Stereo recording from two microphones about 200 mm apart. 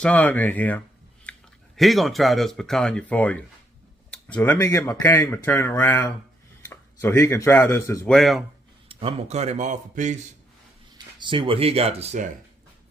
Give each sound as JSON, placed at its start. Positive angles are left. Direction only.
{"t": 0.0, "sound": "speech", "side_deg": 5}
{"t": 8.1, "sound": "speech", "side_deg": 0}
{"t": 8.9, "sound": "a man's voice", "side_deg": -30}
{"t": 10.9, "sound": "speech", "side_deg": -25}